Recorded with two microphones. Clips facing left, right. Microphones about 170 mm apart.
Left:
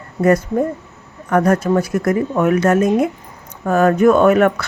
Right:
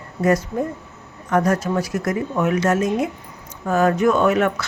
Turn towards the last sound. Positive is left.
turn(degrees=55)  # may be behind; listen again after turning